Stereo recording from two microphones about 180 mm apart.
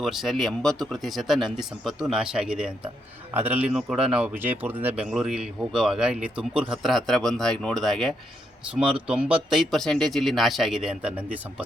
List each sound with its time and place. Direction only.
0.0 s speech: centre (ahead or behind)